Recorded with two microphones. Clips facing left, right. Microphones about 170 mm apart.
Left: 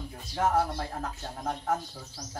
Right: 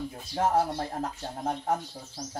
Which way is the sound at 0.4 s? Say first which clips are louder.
Right 1 dB; 20° right (ahead or behind).